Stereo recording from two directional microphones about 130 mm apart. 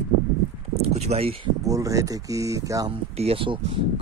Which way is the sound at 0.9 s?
55° right (ahead or behind).